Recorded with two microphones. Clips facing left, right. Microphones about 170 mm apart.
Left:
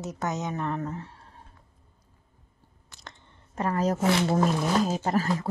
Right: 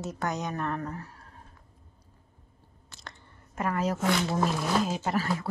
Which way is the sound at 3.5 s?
30° left (ahead or behind).